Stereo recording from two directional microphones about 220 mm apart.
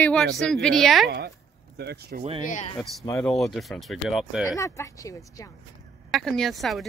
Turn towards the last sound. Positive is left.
turn(degrees=0)  # may be behind; listen again after turning